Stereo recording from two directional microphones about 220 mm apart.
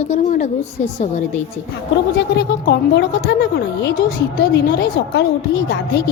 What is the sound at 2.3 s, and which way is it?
A woman's voice, 50° left (ahead or behind).